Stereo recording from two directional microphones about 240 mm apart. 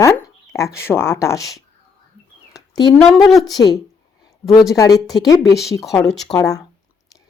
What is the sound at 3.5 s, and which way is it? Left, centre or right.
Speech, centre.